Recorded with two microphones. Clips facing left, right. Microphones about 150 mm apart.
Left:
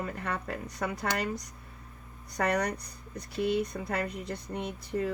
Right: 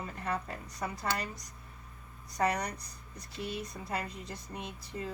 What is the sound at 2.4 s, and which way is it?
Speech, 65° left (ahead or behind).